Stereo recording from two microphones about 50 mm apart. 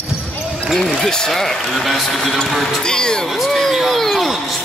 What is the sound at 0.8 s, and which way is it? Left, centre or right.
Speech, centre.